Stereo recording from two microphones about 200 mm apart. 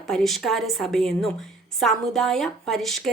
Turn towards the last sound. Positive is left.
turn(degrees=0)  # may be behind; listen again after turning